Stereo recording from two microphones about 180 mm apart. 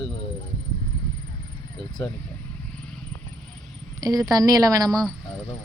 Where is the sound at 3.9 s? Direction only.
20° right (ahead or behind).